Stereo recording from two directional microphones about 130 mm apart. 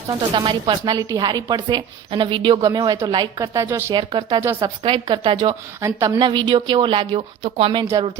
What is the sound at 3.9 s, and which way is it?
Speech, 35° right (ahead or behind).